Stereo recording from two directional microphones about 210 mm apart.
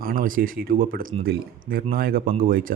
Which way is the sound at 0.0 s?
40° right (ahead or behind).